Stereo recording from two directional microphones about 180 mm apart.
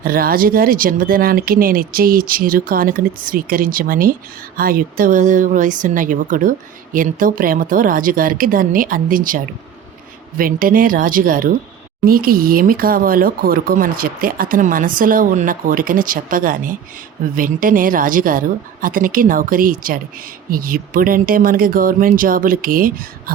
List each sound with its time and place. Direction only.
0.0 s speech: 55° right (ahead or behind)